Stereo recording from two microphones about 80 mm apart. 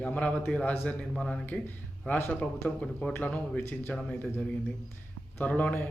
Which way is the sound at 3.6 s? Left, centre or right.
Left.